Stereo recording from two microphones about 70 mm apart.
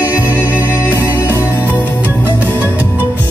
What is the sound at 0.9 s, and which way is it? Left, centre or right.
Music, right.